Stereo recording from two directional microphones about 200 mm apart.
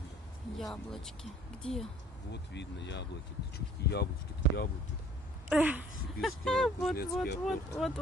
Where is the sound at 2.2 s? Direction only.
60° left (ahead or behind).